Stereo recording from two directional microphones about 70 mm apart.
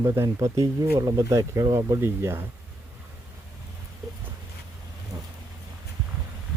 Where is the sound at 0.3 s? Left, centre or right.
Right.